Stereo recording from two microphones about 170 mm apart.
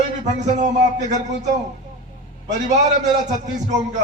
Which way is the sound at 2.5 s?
45° right (ahead or behind).